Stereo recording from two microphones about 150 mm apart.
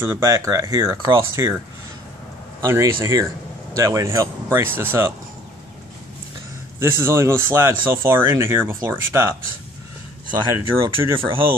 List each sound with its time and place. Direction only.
0.0 s speech: 15° right (ahead or behind)
2.6 s speech: 20° right (ahead or behind)
6.8 s speech: 15° right (ahead or behind)
10.6 s speech: 35° right (ahead or behind)